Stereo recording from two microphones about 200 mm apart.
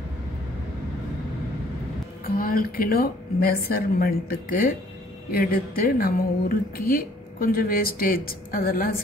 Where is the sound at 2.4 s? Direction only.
45° left (ahead or behind).